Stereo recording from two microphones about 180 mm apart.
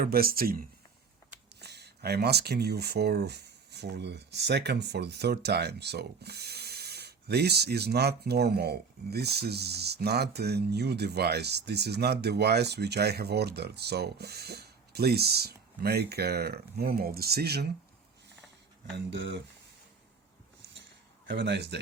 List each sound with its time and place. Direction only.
0.0 s speech: 55° right (ahead or behind)
1.6 s speech: 65° right (ahead or behind)
18.9 s speech: 80° right
21.2 s speech: 75° right (ahead or behind)